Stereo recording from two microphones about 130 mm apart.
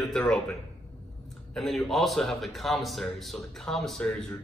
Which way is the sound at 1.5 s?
Centre (ahead or behind).